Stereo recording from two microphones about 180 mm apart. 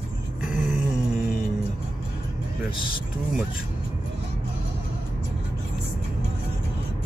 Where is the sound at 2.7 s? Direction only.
30° left (ahead or behind).